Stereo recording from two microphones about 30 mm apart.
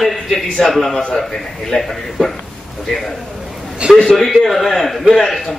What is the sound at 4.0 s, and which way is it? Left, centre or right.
Speech, centre.